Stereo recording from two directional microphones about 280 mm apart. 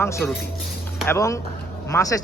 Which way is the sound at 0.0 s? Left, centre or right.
Centre.